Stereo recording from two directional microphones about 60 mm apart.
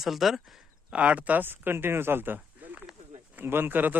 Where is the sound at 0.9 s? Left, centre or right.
Right.